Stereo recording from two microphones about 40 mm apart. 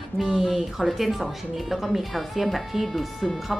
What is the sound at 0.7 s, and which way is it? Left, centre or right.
A woman's voice, centre.